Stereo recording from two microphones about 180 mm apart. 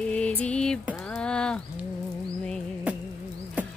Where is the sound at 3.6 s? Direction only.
10° right (ahead or behind).